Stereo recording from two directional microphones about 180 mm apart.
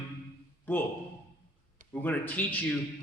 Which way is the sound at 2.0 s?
10° left (ahead or behind).